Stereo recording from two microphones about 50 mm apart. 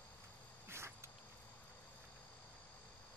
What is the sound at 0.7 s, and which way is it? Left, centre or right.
Insect, right.